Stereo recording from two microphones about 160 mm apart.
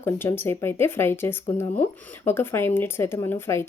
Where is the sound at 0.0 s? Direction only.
15° left (ahead or behind).